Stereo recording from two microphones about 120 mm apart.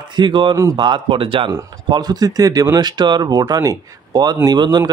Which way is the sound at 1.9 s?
35° right (ahead or behind).